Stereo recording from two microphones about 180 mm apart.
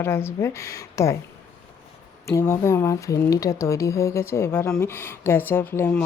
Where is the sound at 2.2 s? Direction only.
15° left (ahead or behind).